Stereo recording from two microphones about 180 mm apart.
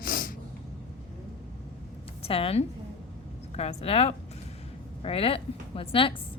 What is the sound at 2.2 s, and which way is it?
A woman's voice, 30° left (ahead or behind).